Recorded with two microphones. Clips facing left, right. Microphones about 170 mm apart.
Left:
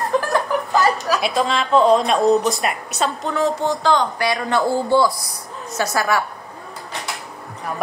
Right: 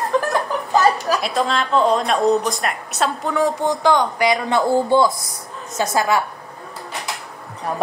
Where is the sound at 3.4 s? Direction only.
15° right (ahead or behind).